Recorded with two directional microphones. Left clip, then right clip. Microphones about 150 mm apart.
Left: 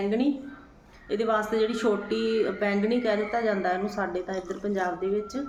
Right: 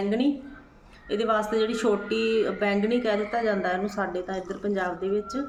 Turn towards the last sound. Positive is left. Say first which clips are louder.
# even
turn(degrees=-15)  # may be behind; listen again after turning